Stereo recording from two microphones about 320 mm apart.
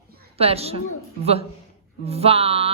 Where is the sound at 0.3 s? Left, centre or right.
Centre.